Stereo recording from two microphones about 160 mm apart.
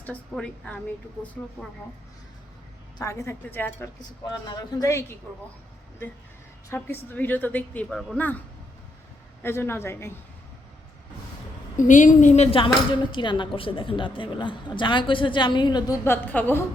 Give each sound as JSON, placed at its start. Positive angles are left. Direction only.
{"t": 0.0, "sound": "a woman's voice", "side_deg": 10}
{"t": 3.0, "sound": "a woman's voice", "side_deg": 20}
{"t": 4.3, "sound": "a man's voice", "side_deg": 25}
{"t": 6.7, "sound": "a woman's voice", "side_deg": 15}
{"t": 9.4, "sound": "a woman's voice", "side_deg": 15}
{"t": 11.8, "sound": "speech", "side_deg": 50}
{"t": 16.0, "sound": "a woman's voice", "side_deg": 15}